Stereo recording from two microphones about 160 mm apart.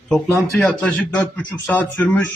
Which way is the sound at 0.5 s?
5° left (ahead or behind).